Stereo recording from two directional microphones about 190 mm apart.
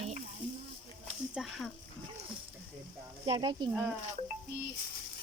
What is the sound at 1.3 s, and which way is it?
Speech, centre (ahead or behind).